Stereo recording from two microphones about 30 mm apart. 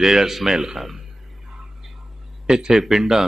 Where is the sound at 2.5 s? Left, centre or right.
Right.